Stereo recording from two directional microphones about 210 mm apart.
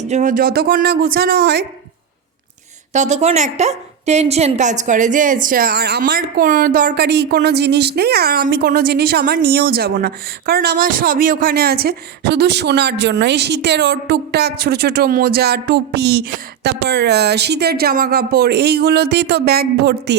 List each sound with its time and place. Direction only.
0.0 s a woman's voice: 35° right (ahead or behind); by 1.6 s 50° right (ahead or behind)
2.9 s a woman's voice: 35° right (ahead or behind); by 20.1 s 50° right (ahead or behind)